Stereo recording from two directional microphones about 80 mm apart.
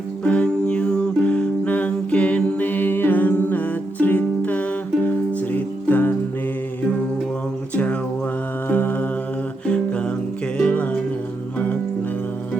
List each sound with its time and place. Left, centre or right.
0.3 s music: centre
5.9 s music: left
8.7 s mantra: left
9.6 s music: centre